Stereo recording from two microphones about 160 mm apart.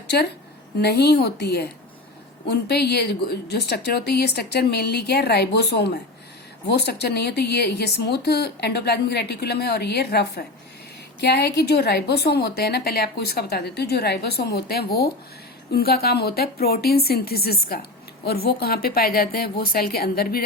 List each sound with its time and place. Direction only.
0.1 s a woman's voice: 90° left; by 20.4 s 70° left (ahead or behind)